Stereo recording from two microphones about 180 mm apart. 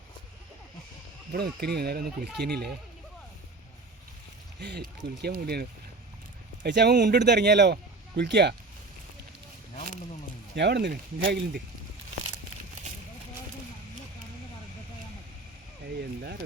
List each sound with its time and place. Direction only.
1.3 s speech: 60° right (ahead or behind)
4.6 s speech: 65° right (ahead or behind)
6.6 s speech: 70° right (ahead or behind)
10.5 s speech: 70° right (ahead or behind)